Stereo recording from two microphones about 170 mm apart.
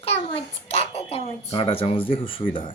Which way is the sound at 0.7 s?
35° left (ahead or behind).